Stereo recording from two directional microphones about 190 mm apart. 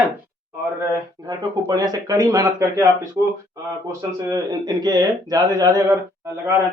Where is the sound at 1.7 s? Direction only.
20° right (ahead or behind).